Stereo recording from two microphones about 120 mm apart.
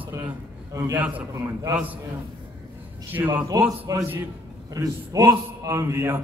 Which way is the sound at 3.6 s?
30° right (ahead or behind).